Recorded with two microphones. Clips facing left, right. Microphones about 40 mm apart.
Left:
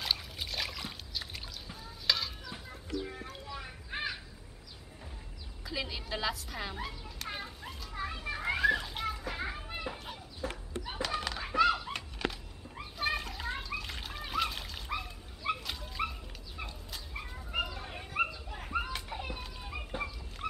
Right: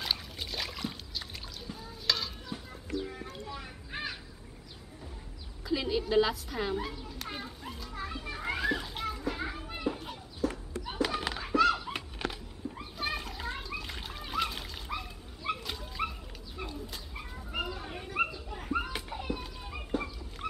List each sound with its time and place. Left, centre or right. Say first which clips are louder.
0.0 s a sound: even; centre
2.5 s clip-clop: right 5 dB; centre
3.5 s crow: left 1 dB; centre
5.6 s children playing: right 8 dB; centre
10.4 s a sound: right 6 dB; left
11.0 s children playing: right 4 dB; centre
11.4 s dog: right 2 dB; centre
11.8 s a sound: even; centre
12.9 s splash: left 3 dB; centre
19.0 s dog: right 3 dB; centre